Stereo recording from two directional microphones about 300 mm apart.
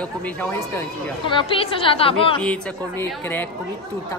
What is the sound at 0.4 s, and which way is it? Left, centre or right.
A woman's voice, centre.